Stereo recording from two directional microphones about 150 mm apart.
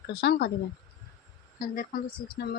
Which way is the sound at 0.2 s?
90° left.